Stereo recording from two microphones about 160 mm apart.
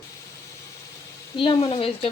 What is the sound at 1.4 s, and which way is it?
Speech, 30° left (ahead or behind).